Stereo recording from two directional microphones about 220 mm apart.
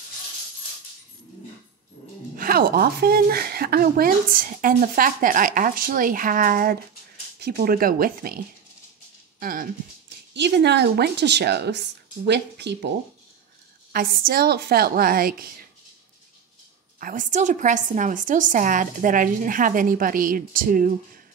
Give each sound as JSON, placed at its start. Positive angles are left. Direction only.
{"t": 2.3, "sound": "speech", "side_deg": -40}
{"t": 9.4, "sound": "speech", "side_deg": -40}
{"t": 13.9, "sound": "speech", "side_deg": -40}
{"t": 17.0, "sound": "speech", "side_deg": -35}